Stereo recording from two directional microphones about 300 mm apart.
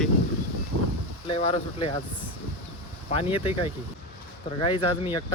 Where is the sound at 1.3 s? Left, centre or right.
Centre.